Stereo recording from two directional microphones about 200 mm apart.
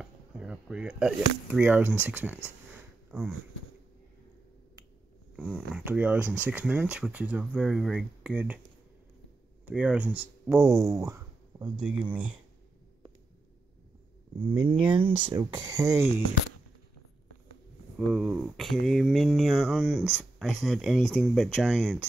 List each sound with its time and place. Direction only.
0.0 s speech: 5° right (ahead or behind)
5.3 s speech: 5° right (ahead or behind)
9.7 s speech: 5° right (ahead or behind)
14.9 s speech: 25° right (ahead or behind)
17.9 s speech: 5° right (ahead or behind)